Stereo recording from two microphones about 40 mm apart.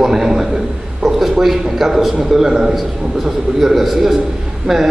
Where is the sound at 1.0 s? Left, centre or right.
Centre.